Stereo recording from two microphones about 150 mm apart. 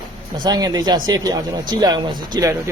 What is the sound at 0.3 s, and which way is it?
Speech, 25° right (ahead or behind).